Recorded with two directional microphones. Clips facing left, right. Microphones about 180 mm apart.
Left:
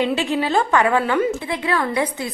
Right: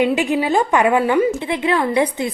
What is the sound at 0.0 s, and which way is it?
A woman's voice, 15° right (ahead or behind).